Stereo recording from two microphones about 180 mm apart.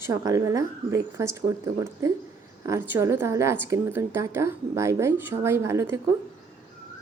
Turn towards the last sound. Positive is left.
turn(degrees=-15)  # may be behind; listen again after turning